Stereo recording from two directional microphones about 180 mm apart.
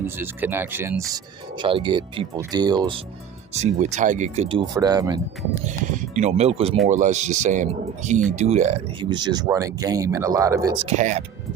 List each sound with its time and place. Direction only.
0.0 s speech: 10° right (ahead or behind)
3.5 s speech: 40° right (ahead or behind); by 5.2 s 20° right (ahead or behind)
5.6 s speech: 40° right (ahead or behind)
9.0 s speech: 25° right (ahead or behind)
10.8 s speech: 40° right (ahead or behind)